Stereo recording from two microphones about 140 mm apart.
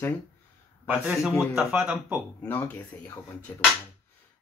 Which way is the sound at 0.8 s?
10° right (ahead or behind).